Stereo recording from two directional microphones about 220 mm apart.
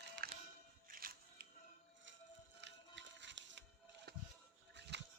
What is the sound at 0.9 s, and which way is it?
Music, 40° right (ahead or behind).